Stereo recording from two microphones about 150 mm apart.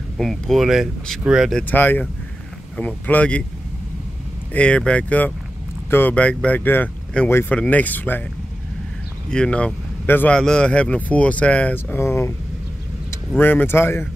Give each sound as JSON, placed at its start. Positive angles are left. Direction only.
{"t": 0.2, "sound": "speech", "side_deg": 0}
{"t": 1.6, "sound": "speech", "side_deg": 10}
{"t": 4.6, "sound": "speech", "side_deg": 10}
{"t": 9.3, "sound": "speech", "side_deg": 5}
{"t": 13.4, "sound": "speech", "side_deg": 10}